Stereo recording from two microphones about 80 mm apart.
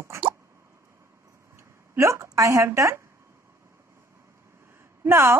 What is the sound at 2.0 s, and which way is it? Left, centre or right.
A woman's voice, right.